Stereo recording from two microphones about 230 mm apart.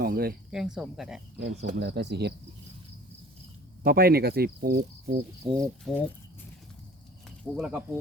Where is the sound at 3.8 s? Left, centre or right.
Right.